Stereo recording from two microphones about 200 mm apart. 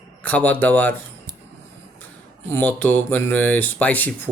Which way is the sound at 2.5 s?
10° left (ahead or behind).